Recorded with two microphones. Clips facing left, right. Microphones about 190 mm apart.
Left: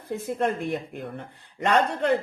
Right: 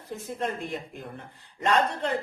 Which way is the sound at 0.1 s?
60° left (ahead or behind).